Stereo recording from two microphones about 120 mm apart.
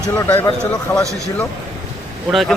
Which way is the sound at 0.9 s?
15° left (ahead or behind).